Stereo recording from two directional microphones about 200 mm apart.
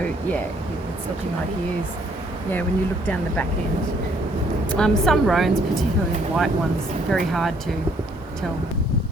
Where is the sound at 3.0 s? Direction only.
10° left (ahead or behind).